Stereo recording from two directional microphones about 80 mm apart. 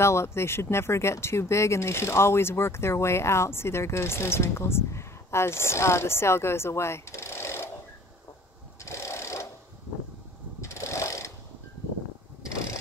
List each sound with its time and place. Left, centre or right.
0.0 s speech: left
8.8 s a sound: left
10.6 s mechanisms: left